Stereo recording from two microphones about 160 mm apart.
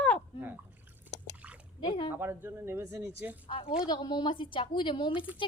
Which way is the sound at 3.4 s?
35° left (ahead or behind).